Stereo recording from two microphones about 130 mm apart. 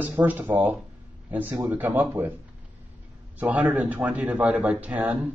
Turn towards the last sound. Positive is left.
turn(degrees=-15)  # may be behind; listen again after turning